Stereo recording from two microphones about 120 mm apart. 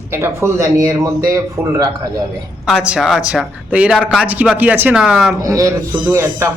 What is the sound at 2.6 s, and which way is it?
A man's voice, 10° right (ahead or behind).